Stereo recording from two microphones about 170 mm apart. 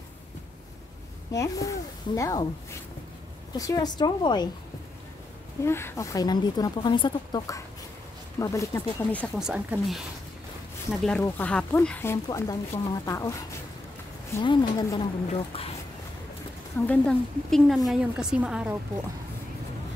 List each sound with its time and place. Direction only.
1.3 s speech: 20° left (ahead or behind)
3.5 s speech: 20° left (ahead or behind)
5.7 s speech: 15° left (ahead or behind)
9.4 s a woman's voice: 5° right (ahead or behind); by 13.4 s 20° left (ahead or behind)
14.4 s a woman's voice: 25° left (ahead or behind)
16.8 s a woman's voice: 10° left (ahead or behind)